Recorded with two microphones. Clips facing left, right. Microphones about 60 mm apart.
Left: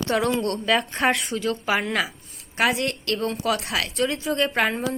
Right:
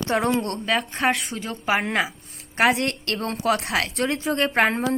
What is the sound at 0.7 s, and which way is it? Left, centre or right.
Speech, centre.